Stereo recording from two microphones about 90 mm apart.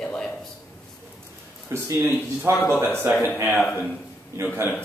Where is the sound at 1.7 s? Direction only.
30° right (ahead or behind).